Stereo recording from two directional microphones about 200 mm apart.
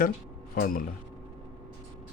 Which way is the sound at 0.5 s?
45° left (ahead or behind).